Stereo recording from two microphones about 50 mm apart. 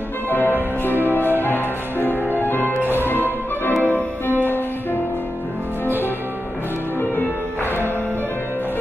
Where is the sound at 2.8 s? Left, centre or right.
Right.